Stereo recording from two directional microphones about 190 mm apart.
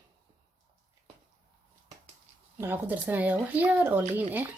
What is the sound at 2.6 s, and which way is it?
Speech, 10° right (ahead or behind).